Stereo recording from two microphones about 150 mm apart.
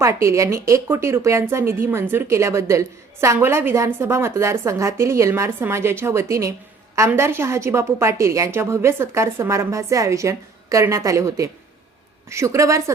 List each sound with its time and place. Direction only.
0.0 s a woman's voice: 20° right (ahead or behind)